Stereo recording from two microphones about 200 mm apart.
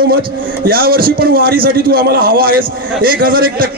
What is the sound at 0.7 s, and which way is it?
A man's voice, 50° right (ahead or behind).